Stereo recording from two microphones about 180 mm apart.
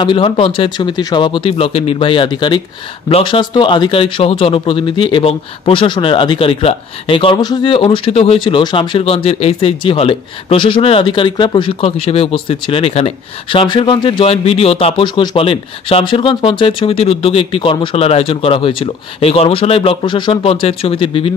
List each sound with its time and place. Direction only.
0.0 s speech: 30° left (ahead or behind)